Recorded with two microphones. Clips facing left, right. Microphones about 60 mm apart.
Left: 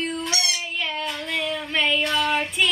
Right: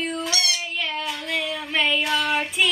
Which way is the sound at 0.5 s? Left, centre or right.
Centre.